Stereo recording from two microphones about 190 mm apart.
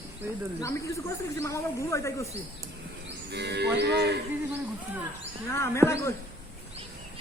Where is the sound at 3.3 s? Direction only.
60° right (ahead or behind).